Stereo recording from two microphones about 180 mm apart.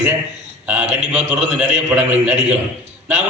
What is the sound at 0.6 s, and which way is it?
A man's voice, 10° right (ahead or behind).